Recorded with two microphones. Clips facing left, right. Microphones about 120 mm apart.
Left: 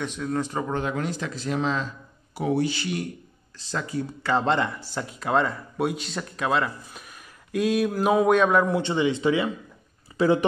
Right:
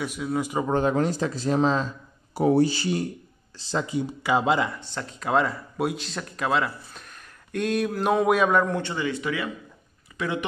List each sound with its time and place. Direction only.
0.0 s speech: 10° right (ahead or behind)
0.7 s speech: 35° right (ahead or behind)
3.5 s speech: 20° right (ahead or behind); by 8.8 s 5° left (ahead or behind)
8.8 s speech: 25° left (ahead or behind)